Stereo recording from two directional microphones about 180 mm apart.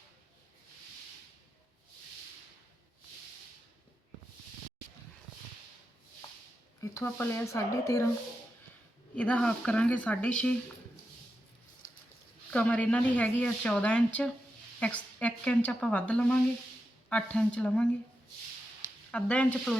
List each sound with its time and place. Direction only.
6.9 s speech: 15° left (ahead or behind)
9.1 s speech: 5° left (ahead or behind)
12.5 s speech: 5° left (ahead or behind)
19.1 s speech: 5° left (ahead or behind)